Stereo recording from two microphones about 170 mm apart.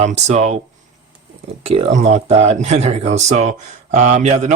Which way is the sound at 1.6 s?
40° right (ahead or behind).